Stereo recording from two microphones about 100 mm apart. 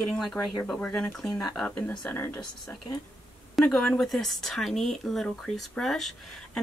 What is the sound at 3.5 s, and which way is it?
Speech, 5° left (ahead or behind).